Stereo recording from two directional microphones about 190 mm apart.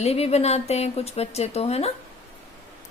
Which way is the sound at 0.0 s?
35° left (ahead or behind).